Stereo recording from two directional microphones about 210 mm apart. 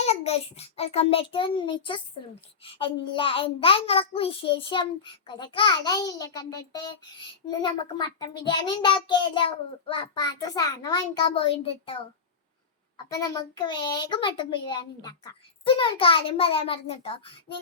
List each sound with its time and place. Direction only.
0.0 s a child's voice: 30° left (ahead or behind)
13.1 s a child's voice: 15° left (ahead or behind)